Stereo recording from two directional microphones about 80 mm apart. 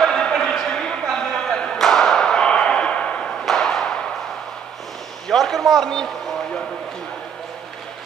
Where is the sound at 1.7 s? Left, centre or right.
Centre.